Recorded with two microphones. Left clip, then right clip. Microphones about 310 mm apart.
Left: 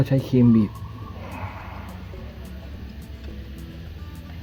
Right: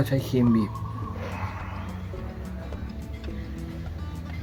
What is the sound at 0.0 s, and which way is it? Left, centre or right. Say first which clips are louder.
Speech: left 4 dB; left.